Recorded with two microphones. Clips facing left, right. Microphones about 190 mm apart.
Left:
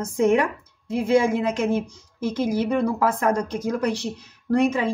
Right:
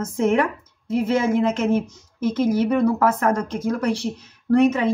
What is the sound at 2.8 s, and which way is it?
Speech, 40° right (ahead or behind).